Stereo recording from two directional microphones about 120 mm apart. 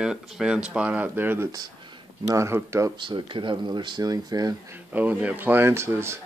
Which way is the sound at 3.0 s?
40° right (ahead or behind).